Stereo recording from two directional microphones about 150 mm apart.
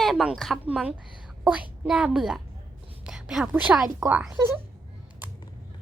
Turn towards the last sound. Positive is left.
turn(degrees=-10)  # may be behind; listen again after turning